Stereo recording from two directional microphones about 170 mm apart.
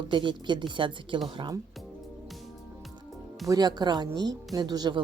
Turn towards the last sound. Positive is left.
turn(degrees=-25)  # may be behind; listen again after turning